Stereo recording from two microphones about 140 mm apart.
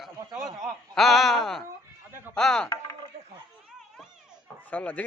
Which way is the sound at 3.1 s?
55° right (ahead or behind).